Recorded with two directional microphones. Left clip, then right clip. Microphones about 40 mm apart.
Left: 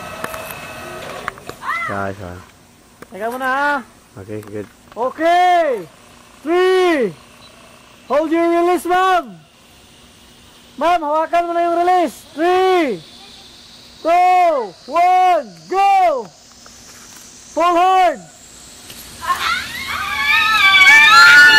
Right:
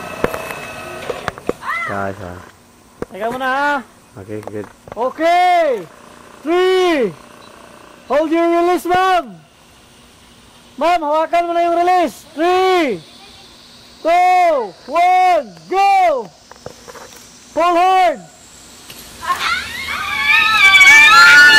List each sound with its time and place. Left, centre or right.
0.0 s printer: centre
1.6 s speech: centre
3.3 s speech: right
4.5 s speech: centre
5.1 s a man's voice: right
6.5 s a sound: right
8.2 s a man's voice: right
10.8 s a man's voice: right
14.0 s a man's voice: centre
14.6 s speech: centre
15.0 s a man's voice: right
17.6 s speech: centre
18.9 s a sound: centre